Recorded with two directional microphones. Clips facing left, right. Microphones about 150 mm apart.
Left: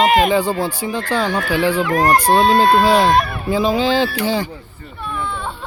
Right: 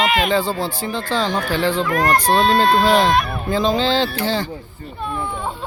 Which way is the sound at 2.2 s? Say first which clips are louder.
Left 2 dB; 10° left (ahead or behind).